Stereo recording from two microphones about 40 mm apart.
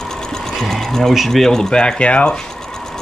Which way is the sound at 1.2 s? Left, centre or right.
Centre.